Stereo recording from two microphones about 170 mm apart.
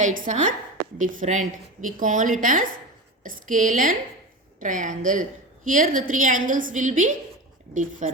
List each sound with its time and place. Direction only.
0.0 s a woman's voice: 45° right (ahead or behind)